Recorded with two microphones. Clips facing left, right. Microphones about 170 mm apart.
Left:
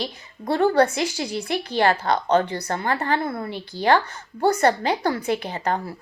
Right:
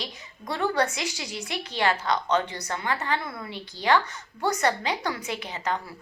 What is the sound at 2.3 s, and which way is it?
A woman's voice, 55° left (ahead or behind).